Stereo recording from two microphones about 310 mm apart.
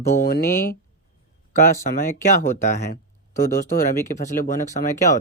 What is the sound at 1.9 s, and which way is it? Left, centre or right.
Speech, left.